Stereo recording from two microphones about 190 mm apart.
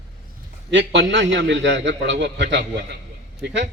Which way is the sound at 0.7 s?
65° right (ahead or behind).